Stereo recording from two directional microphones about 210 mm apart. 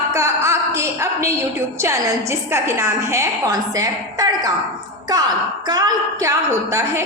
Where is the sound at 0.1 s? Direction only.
15° right (ahead or behind).